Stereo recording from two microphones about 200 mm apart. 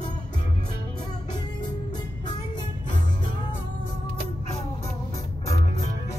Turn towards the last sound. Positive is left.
turn(degrees=15)  # may be behind; listen again after turning